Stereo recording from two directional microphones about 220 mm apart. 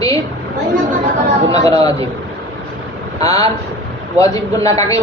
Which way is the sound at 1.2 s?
30° right (ahead or behind).